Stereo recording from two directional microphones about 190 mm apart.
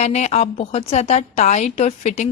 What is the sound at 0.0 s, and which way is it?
A woman's voice, 35° left (ahead or behind).